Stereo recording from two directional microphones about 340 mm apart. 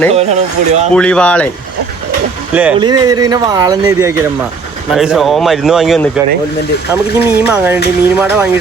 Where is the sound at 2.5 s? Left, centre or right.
Centre.